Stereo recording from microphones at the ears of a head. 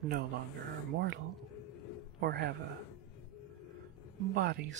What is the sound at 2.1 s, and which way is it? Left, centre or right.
Speech, right.